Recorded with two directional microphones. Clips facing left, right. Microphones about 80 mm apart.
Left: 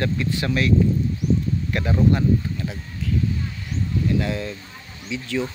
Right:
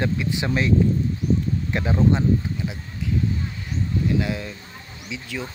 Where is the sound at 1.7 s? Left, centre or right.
Centre.